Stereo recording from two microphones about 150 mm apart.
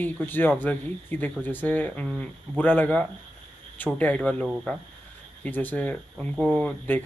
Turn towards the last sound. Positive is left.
turn(degrees=5)  # may be behind; listen again after turning